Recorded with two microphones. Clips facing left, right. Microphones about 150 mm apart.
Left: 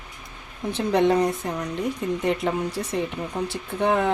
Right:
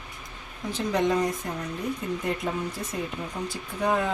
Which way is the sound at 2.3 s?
75° left (ahead or behind).